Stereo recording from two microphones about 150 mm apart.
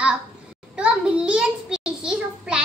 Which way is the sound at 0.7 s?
5° right (ahead or behind).